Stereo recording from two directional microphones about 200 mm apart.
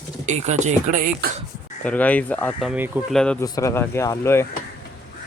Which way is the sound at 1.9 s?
5° left (ahead or behind).